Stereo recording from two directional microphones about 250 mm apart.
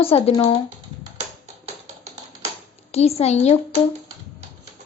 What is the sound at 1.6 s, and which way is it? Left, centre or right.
Tap, right.